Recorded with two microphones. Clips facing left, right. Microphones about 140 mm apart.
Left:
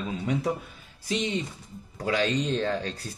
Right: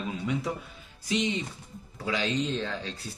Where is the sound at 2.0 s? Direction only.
50° left (ahead or behind).